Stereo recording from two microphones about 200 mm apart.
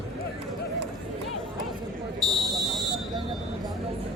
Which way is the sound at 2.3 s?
Centre (ahead or behind).